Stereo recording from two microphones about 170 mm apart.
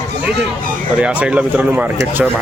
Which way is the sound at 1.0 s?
5° right (ahead or behind).